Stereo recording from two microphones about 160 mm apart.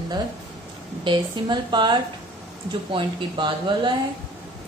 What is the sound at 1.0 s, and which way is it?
A woman's voice, 30° right (ahead or behind).